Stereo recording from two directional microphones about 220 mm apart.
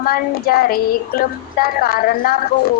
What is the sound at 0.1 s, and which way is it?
A woman's voice, 45° left (ahead or behind).